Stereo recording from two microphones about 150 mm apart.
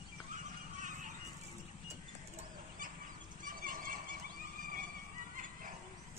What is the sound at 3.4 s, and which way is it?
Horse, 65° right (ahead or behind).